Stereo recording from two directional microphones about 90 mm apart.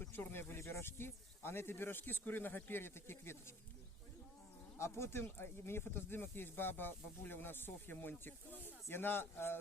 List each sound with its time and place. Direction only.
0.0 s speech: 25° left (ahead or behind)
4.8 s speech: 30° left (ahead or behind)